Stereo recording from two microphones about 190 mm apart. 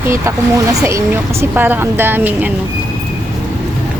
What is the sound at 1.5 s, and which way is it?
Speech, 10° right (ahead or behind).